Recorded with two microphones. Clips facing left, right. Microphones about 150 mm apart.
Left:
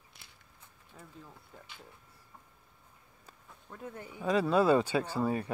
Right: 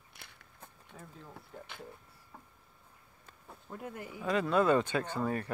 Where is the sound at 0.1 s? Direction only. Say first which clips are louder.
Right 6 dB; 60° right (ahead or behind).